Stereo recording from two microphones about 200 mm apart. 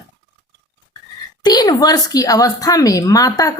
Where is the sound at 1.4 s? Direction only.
20° left (ahead or behind).